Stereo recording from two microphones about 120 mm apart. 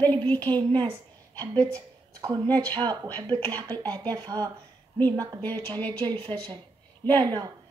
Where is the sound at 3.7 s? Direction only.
15° left (ahead or behind).